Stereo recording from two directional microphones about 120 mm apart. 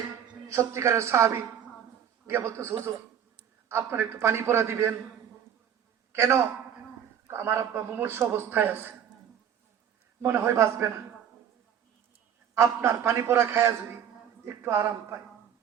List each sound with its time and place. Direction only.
0.4 s a man's voice: 25° right (ahead or behind)
6.1 s a man's voice: 25° right (ahead or behind)
10.2 s a man's voice: 20° right (ahead or behind)
12.5 s a man's voice: 20° right (ahead or behind)